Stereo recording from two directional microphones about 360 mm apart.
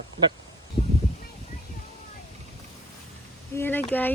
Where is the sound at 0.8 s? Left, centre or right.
Centre.